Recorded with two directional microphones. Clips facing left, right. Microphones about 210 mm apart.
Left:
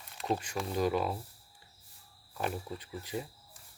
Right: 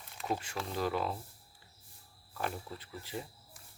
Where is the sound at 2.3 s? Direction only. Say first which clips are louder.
Left 3 dB; 15° left (ahead or behind).